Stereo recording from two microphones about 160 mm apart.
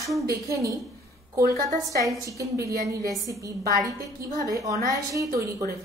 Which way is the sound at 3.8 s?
20° right (ahead or behind).